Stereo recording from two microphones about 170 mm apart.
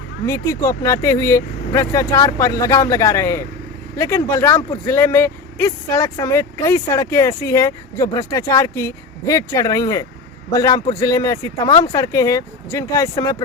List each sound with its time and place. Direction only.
0.3 s speech: 15° left (ahead or behind)